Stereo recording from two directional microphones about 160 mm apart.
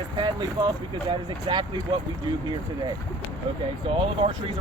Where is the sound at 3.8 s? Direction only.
35° right (ahead or behind).